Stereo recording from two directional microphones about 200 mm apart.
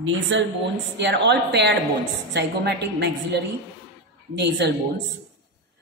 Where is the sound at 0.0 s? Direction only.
65° right (ahead or behind).